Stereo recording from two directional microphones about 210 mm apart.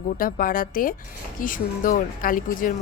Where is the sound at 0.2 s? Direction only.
40° left (ahead or behind).